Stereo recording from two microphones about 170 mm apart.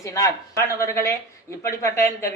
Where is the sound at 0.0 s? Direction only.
20° left (ahead or behind).